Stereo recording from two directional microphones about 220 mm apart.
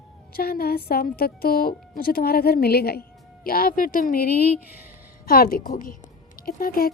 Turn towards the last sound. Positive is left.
turn(degrees=40)  # may be behind; listen again after turning